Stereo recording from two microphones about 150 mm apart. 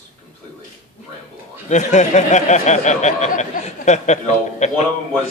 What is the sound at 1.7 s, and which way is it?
Speech, 50° left (ahead or behind).